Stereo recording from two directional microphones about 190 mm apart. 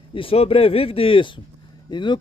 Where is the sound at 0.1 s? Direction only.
30° left (ahead or behind).